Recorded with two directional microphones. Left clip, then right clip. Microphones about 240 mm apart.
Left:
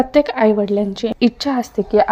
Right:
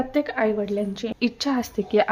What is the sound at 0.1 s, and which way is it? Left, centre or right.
A woman's voice, left.